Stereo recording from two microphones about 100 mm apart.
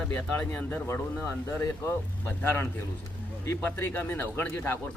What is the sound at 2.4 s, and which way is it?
A man's voice, 20° left (ahead or behind).